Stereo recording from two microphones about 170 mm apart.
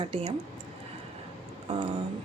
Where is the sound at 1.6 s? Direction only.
30° right (ahead or behind).